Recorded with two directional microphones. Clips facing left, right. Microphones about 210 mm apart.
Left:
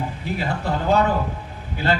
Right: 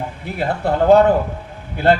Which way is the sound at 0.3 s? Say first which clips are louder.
Right 8 dB; 55° right (ahead or behind).